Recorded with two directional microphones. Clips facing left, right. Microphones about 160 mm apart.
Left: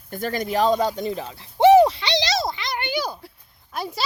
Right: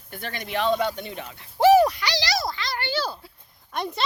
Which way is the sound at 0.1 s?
40° left (ahead or behind).